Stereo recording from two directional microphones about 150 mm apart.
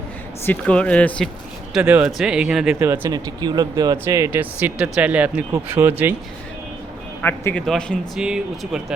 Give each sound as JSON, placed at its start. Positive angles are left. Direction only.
{"t": 0.4, "sound": "speech", "side_deg": 10}
{"t": 1.7, "sound": "speech", "side_deg": -10}
{"t": 2.7, "sound": "speech", "side_deg": -15}
{"t": 3.1, "sound": "speech", "side_deg": -25}
{"t": 7.2, "sound": "speech", "side_deg": 10}